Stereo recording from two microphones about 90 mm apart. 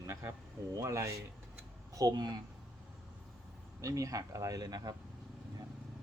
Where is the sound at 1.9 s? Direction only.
45° right (ahead or behind).